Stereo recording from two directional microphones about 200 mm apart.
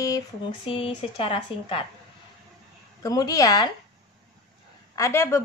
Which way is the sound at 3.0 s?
20° left (ahead or behind).